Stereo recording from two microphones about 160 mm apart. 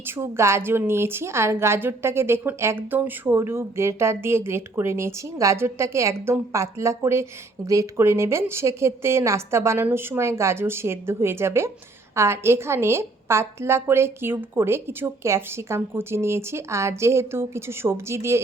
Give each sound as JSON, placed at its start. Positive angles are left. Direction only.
{"t": 0.2, "sound": "a woman's voice", "side_deg": -15}